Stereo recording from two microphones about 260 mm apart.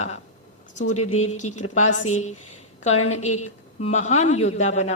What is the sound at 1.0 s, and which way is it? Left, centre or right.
Speech, left.